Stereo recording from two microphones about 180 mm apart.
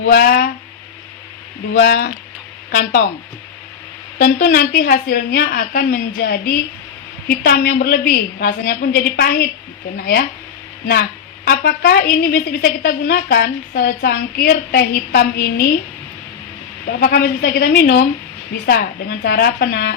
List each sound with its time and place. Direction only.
0.0 s a woman's voice: 60° left (ahead or behind)
1.7 s a woman's voice: 70° left (ahead or behind)
4.2 s a woman's voice: 55° left (ahead or behind)
11.4 s a woman's voice: 55° left (ahead or behind)
17.0 s a woman's voice: 60° left (ahead or behind)